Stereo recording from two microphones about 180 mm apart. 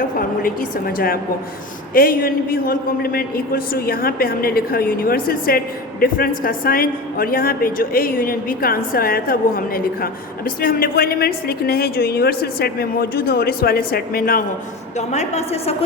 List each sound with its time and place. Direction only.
0.2 s a woman's voice: 50° left (ahead or behind)
14.9 s a woman's voice: 40° left (ahead or behind)